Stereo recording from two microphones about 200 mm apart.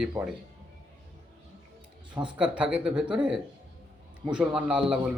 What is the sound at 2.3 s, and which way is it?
Speech, 5° right (ahead or behind).